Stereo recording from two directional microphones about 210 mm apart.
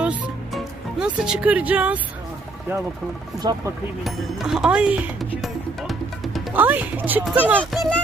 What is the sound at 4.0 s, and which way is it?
Speech, centre (ahead or behind).